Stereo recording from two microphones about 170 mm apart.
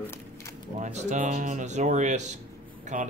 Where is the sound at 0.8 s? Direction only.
45° right (ahead or behind).